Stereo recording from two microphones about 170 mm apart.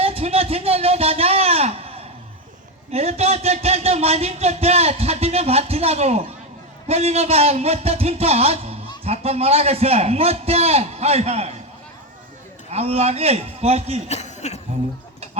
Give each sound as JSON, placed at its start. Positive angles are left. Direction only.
{"t": 0.0, "sound": "a sound", "side_deg": -35}
{"t": 2.9, "sound": "speech", "side_deg": -35}
{"t": 12.7, "sound": "speech", "side_deg": -35}
{"t": 14.1, "sound": "speech", "side_deg": 40}